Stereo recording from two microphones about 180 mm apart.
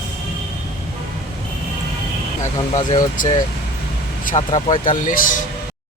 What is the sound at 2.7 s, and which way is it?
Speech, 45° left (ahead or behind).